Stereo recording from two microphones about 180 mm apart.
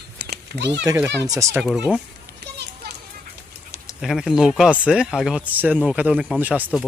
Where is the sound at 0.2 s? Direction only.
70° right (ahead or behind).